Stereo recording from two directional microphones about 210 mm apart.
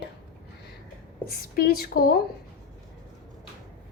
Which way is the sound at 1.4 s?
45° left (ahead or behind).